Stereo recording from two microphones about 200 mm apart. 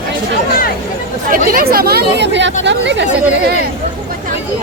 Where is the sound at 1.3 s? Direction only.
45° right (ahead or behind); by 3.0 s 60° right (ahead or behind).